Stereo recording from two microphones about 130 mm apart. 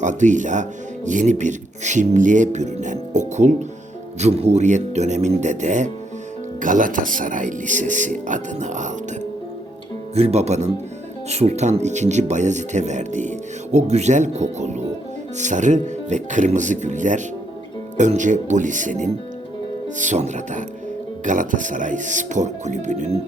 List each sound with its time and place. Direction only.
0.0 s speech: 70° right (ahead or behind)
4.2 s speech: 55° right (ahead or behind)
6.6 s speech: 90° right; by 8.9 s 70° right (ahead or behind)
10.2 s speech: 55° right (ahead or behind)